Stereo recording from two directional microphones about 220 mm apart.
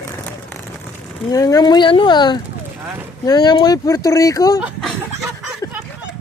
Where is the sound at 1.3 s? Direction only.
15° left (ahead or behind).